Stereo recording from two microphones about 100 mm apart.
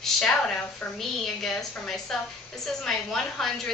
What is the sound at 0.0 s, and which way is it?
A woman's voice, 10° left (ahead or behind).